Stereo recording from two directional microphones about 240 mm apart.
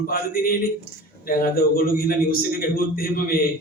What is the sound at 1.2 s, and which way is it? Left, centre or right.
A man's voice, left.